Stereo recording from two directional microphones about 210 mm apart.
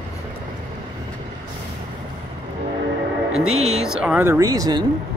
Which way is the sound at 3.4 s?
90° right.